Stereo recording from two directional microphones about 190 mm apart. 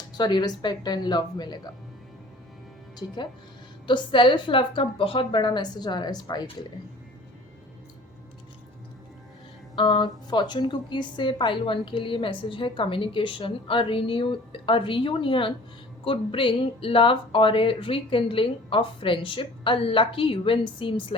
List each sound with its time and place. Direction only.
0.2 s a woman's voice: 20° left (ahead or behind)
3.8 s a woman's voice: 25° left (ahead or behind)
9.7 s a woman's voice: 25° left (ahead or behind)